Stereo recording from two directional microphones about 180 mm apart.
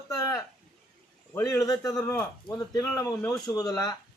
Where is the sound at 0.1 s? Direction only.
15° left (ahead or behind).